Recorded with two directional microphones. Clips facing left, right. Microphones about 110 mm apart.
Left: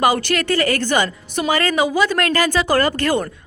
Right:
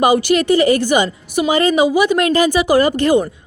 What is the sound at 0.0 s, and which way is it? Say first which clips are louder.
A woman's voice: right 4 dB; 15° right (ahead or behind).